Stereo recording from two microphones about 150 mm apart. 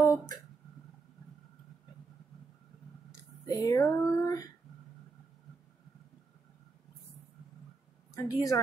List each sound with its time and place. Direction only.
0.0 s a sound: 20° left (ahead or behind)
3.4 s female singing: 25° left (ahead or behind)
8.1 s a woman's voice: 20° left (ahead or behind)